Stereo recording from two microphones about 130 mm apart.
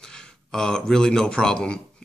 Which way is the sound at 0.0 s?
5° left (ahead or behind).